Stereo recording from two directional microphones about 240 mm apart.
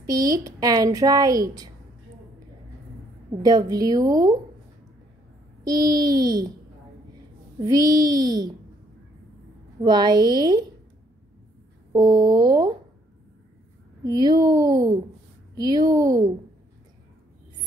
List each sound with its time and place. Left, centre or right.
0.0 s a woman's voice: centre
3.4 s a woman's voice: centre
5.6 s a woman's voice: centre
7.6 s a woman's voice: centre
9.8 s a woman's voice: centre
11.9 s a woman's voice: centre
14.0 s a woman's voice: centre